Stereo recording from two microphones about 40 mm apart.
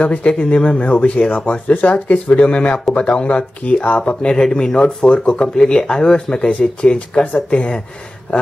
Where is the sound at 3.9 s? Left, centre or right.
Left.